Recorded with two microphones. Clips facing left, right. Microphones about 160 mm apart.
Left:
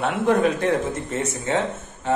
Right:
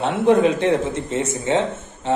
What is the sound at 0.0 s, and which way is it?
A man's voice, 25° right (ahead or behind).